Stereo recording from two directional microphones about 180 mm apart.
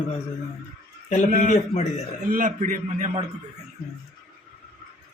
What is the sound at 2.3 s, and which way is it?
Speech, 45° right (ahead or behind).